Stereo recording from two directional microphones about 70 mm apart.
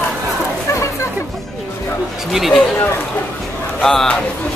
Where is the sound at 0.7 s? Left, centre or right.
Left.